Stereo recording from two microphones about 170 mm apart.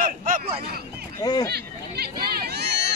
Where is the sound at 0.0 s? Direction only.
50° right (ahead or behind).